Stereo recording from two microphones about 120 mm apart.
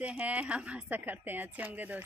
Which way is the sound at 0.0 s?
10° right (ahead or behind).